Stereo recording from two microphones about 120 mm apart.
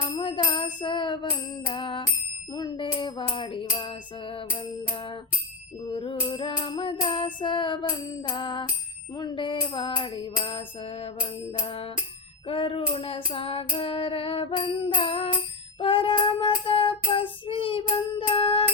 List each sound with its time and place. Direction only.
0.2 s music: 45° left (ahead or behind)
5.9 s child singing: 45° left (ahead or behind)
7.4 s music: 40° left (ahead or behind)
9.1 s child singing: 40° left (ahead or behind)